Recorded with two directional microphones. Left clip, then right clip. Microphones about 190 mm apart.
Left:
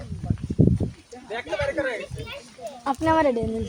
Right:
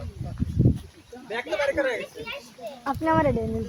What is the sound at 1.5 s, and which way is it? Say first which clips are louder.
Speech: right 1 dB; 20° right (ahead or behind).